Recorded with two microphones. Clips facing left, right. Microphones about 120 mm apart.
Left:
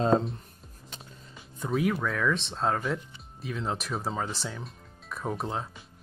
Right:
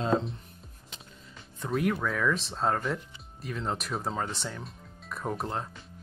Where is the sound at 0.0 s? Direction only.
40° left (ahead or behind).